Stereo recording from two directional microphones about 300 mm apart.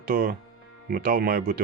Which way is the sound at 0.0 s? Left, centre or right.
Right.